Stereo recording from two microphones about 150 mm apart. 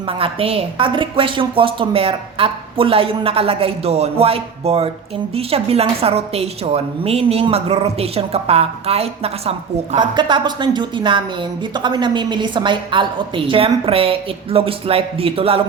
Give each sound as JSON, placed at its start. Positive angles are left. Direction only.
{"t": 0.0, "sound": "a woman's voice", "side_deg": -35}
{"t": 10.0, "sound": "a woman's voice", "side_deg": -30}